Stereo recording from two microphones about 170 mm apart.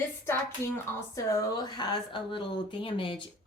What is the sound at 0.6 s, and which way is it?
Speech, 15° left (ahead or behind).